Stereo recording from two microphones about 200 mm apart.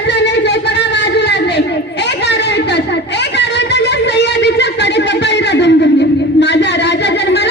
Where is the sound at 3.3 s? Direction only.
60° left (ahead or behind).